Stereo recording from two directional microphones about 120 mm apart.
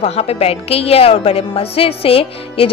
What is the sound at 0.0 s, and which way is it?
A woman's voice, 60° left (ahead or behind).